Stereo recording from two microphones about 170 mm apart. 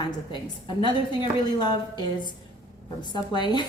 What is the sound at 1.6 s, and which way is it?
Speech, 25° left (ahead or behind).